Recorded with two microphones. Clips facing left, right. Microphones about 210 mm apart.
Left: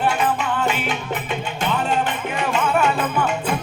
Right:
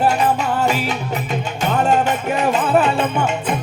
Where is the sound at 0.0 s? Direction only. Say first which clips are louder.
Right 4 dB; 40° right (ahead or behind).